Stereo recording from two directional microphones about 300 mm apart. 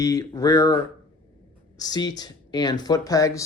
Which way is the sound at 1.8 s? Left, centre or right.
Centre.